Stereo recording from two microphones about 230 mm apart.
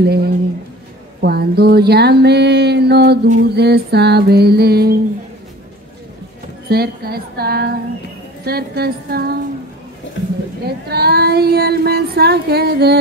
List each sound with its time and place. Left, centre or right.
0.0 s child singing: right
6.7 s child singing: right
10.9 s child singing: right